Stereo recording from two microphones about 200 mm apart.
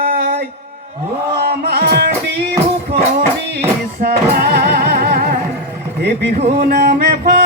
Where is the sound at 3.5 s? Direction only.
50° right (ahead or behind).